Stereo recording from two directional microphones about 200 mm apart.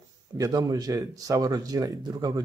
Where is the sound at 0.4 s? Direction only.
20° right (ahead or behind).